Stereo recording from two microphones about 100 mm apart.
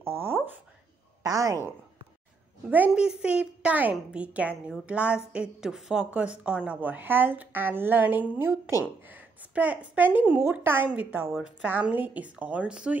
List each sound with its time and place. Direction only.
0.0 s speech: 25° right (ahead or behind)
1.2 s a woman's voice: 35° right (ahead or behind)
2.9 s a woman's voice: 10° right (ahead or behind)